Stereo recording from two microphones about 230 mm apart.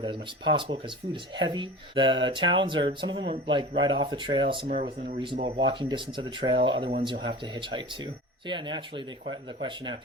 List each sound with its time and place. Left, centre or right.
0.0 s speech: right